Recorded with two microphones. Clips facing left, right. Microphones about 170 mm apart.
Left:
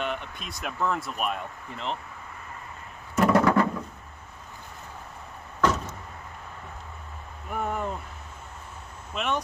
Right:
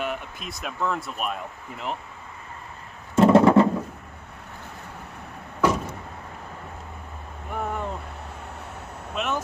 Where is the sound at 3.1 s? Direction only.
25° right (ahead or behind).